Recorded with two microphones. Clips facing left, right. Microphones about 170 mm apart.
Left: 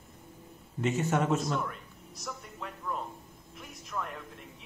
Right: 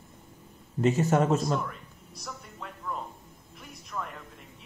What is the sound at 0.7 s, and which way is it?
Speech, 35° right (ahead or behind).